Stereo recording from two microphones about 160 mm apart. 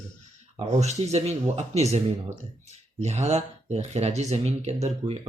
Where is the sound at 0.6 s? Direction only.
40° right (ahead or behind).